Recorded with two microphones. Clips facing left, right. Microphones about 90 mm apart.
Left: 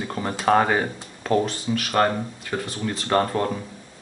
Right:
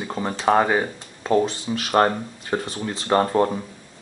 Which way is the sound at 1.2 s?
20° right (ahead or behind).